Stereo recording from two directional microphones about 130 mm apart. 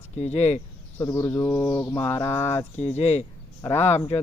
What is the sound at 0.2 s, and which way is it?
Mantra, 55° left (ahead or behind).